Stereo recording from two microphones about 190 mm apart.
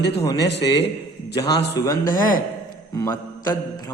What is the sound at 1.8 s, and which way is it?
Speech, 20° left (ahead or behind).